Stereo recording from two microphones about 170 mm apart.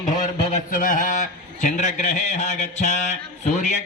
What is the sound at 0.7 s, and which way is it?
A man's voice, 55° left (ahead or behind).